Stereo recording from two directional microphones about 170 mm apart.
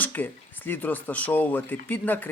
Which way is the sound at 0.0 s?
10° left (ahead or behind).